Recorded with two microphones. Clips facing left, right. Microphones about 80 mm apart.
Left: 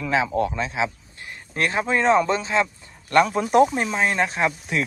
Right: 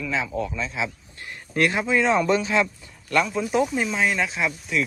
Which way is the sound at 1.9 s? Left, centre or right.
Left.